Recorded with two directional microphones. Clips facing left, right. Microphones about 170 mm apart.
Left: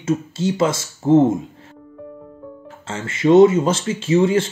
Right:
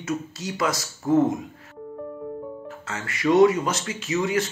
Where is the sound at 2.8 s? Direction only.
25° left (ahead or behind).